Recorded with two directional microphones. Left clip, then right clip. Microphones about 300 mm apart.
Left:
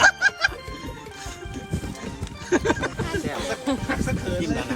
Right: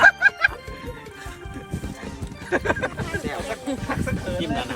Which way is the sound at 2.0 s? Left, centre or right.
Centre.